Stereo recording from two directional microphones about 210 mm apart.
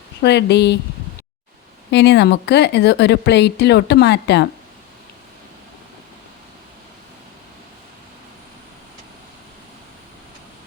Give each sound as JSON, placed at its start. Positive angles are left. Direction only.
{"t": 0.2, "sound": "speech", "side_deg": 55}
{"t": 1.9, "sound": "speech", "side_deg": 55}